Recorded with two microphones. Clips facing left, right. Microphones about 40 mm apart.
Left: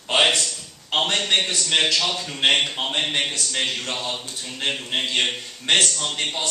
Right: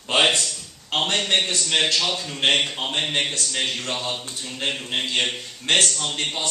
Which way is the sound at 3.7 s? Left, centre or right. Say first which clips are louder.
Even; centre.